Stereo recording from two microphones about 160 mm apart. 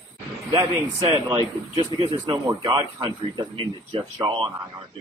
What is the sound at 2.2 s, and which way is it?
Speech, 30° right (ahead or behind).